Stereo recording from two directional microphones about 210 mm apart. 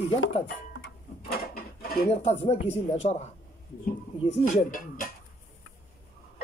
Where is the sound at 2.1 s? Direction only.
30° left (ahead or behind).